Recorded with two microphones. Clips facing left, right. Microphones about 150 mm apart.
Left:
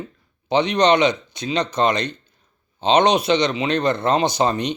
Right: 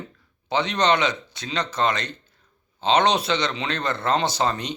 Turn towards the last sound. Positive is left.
turn(degrees=20)  # may be behind; listen again after turning